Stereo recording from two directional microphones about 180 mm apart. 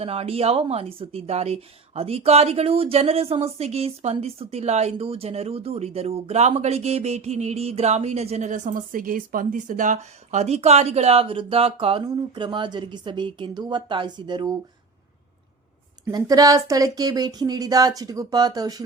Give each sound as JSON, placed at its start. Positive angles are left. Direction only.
{"t": 0.0, "sound": "a woman's voice", "side_deg": -35}
{"t": 16.0, "sound": "speech", "side_deg": -20}